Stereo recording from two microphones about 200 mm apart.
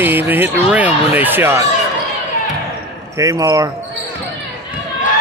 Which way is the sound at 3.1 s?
15° right (ahead or behind).